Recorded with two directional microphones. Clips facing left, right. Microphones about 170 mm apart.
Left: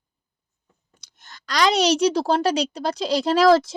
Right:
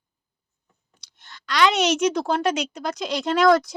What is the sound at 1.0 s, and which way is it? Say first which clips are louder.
Speech: even; 45° left (ahead or behind).